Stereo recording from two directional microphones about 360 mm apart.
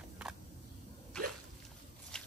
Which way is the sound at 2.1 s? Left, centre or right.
Centre.